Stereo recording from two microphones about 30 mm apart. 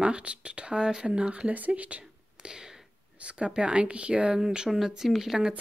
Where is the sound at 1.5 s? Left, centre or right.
Right.